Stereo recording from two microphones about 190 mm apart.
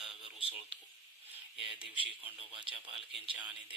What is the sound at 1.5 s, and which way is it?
Speech, centre (ahead or behind).